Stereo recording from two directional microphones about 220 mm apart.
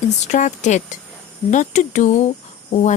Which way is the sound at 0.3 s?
35° left (ahead or behind).